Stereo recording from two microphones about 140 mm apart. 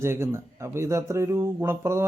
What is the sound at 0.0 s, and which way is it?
A man's voice, 20° right (ahead or behind).